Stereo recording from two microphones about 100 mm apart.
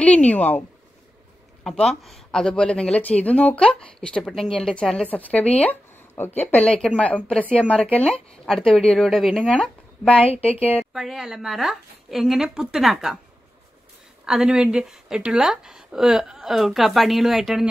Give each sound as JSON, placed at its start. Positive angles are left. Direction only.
{"t": 0.0, "sound": "speech", "side_deg": 15}
{"t": 1.6, "sound": "speech", "side_deg": 0}
{"t": 9.4, "sound": "speech", "side_deg": 10}
{"t": 10.3, "sound": "a woman's voice", "side_deg": 85}
{"t": 10.9, "sound": "speech", "side_deg": -5}
{"t": 14.2, "sound": "speech", "side_deg": -5}